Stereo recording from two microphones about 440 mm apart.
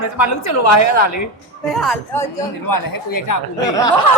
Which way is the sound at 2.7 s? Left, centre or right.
Left.